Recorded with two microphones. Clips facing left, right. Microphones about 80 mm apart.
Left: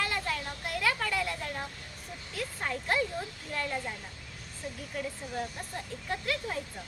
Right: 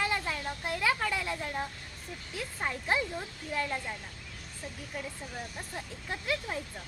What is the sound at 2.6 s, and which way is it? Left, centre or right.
Speech, centre.